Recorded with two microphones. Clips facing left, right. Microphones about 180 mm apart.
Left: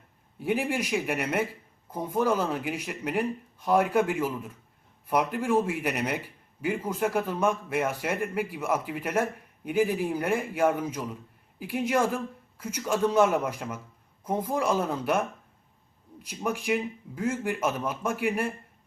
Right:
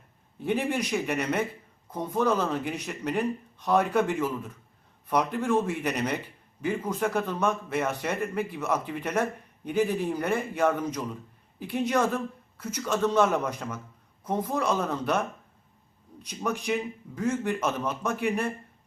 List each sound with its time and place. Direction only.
0.3 s a man's voice: 10° left (ahead or behind)
16.2 s a man's voice: 10° left (ahead or behind)